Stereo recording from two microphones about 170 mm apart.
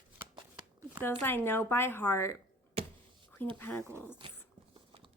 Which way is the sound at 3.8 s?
15° right (ahead or behind).